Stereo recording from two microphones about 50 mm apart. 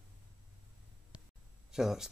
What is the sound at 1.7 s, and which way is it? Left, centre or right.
Speech, centre.